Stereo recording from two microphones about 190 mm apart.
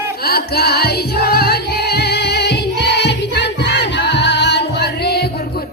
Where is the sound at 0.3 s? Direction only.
55° left (ahead or behind).